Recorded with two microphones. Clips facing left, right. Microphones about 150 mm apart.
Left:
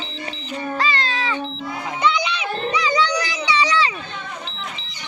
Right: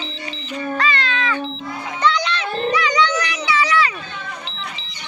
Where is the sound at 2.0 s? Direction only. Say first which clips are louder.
Right 1 dB; 10° left (ahead or behind).